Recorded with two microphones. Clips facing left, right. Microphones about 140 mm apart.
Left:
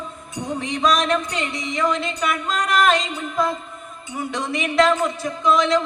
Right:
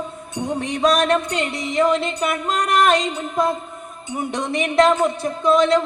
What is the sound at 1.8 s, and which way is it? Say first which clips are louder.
Music: right 3 dB; 60° right (ahead or behind).